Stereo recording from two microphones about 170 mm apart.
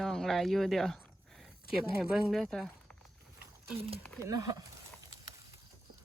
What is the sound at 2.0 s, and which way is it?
Speech, centre (ahead or behind).